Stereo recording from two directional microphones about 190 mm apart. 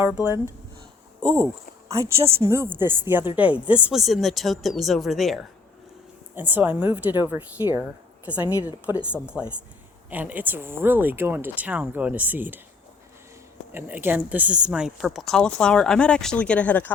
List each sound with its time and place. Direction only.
0.0 s speech: 10° right (ahead or behind)
1.2 s speech: 20° right (ahead or behind)
13.7 s speech: 10° right (ahead or behind); by 16.9 s 10° left (ahead or behind)